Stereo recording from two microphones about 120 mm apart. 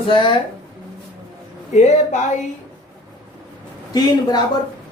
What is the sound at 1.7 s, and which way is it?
Speech, 80° left.